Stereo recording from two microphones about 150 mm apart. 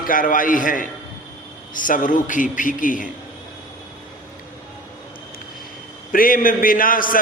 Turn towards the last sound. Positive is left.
turn(degrees=65)  # may be behind; listen again after turning